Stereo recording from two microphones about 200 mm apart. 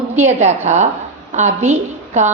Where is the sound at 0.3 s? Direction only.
35° right (ahead or behind).